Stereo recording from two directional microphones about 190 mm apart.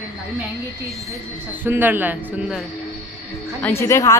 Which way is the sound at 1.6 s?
10° right (ahead or behind).